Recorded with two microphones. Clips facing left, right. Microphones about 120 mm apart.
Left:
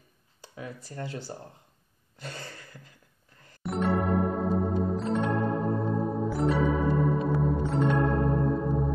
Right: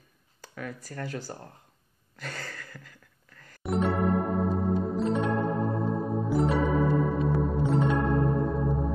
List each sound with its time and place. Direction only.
0.7 s speech: 25° left (ahead or behind)
2.1 s a sound: 25° left (ahead or behind)
3.6 s music: centre (ahead or behind)